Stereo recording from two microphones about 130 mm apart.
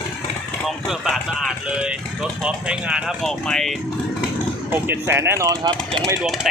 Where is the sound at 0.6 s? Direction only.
Centre (ahead or behind).